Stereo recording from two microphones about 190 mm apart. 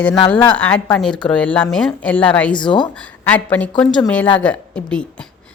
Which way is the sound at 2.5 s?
25° left (ahead or behind).